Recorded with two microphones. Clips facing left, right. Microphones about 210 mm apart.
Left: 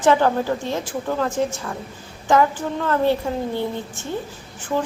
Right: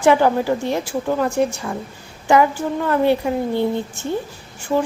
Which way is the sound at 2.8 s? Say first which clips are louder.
Right 2 dB; 15° right (ahead or behind).